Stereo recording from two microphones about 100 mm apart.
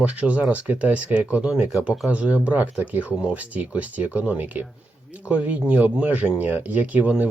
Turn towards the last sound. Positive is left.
turn(degrees=-15)  # may be behind; listen again after turning